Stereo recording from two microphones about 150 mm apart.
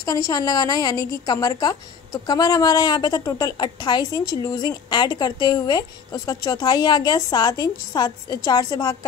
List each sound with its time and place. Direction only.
0.0 s a woman's voice: 25° left (ahead or behind)